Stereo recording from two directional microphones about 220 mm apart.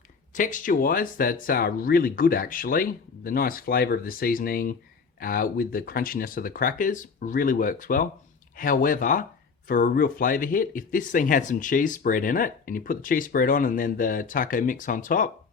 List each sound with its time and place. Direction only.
0.3 s speech: 35° left (ahead or behind)